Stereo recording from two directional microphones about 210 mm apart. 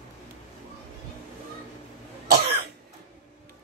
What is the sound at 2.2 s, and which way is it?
Cough, 50° right (ahead or behind).